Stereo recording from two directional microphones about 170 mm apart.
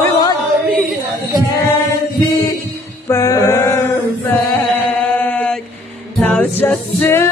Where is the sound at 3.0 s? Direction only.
20° left (ahead or behind).